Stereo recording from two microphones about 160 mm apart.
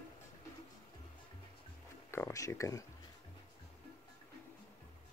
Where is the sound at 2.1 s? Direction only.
15° left (ahead or behind).